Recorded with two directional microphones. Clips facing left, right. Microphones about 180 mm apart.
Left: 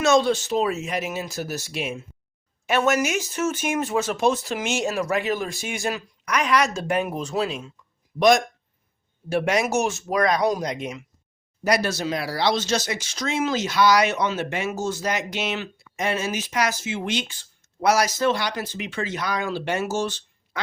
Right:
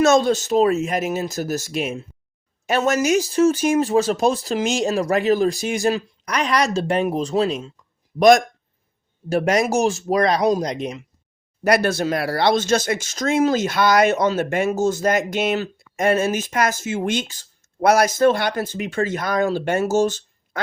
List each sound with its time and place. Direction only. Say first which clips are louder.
0.0 s speech: right 3 dB; 45° right (ahead or behind)
9.3 s speech: right 3 dB; 40° right (ahead or behind)
11.6 s speech: right 5 dB; 55° right (ahead or behind)